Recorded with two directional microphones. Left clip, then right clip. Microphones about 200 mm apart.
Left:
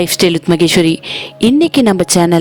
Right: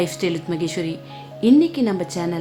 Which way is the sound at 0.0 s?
45° left (ahead or behind).